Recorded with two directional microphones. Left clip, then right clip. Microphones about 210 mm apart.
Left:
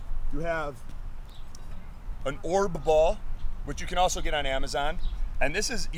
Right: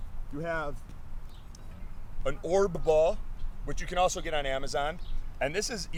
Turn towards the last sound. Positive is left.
turn(degrees=-55)  # may be behind; listen again after turning